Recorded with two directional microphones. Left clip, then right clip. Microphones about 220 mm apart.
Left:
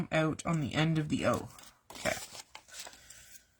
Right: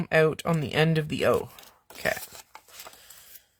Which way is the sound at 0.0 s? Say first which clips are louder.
Right 9 dB; 40° right (ahead or behind).